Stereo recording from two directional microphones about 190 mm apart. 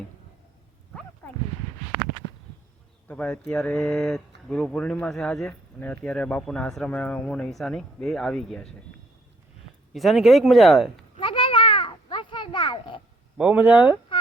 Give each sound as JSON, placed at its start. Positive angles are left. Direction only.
{"t": 3.1, "sound": "speech", "side_deg": 10}
{"t": 9.9, "sound": "speech", "side_deg": 0}
{"t": 11.2, "sound": "a sound", "side_deg": 30}
{"t": 13.3, "sound": "speech", "side_deg": -5}